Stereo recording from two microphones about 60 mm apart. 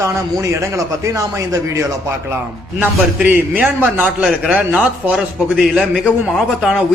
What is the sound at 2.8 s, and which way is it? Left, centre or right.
Speech, right.